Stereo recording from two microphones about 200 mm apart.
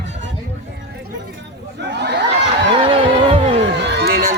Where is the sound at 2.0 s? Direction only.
55° right (ahead or behind).